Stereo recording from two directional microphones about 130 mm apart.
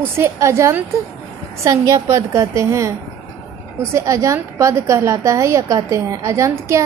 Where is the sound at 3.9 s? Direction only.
20° right (ahead or behind).